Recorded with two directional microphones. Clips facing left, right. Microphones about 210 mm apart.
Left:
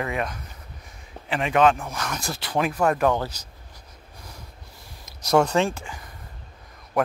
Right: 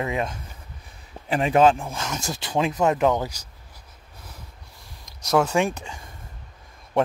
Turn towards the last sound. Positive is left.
turn(degrees=-25)  # may be behind; listen again after turning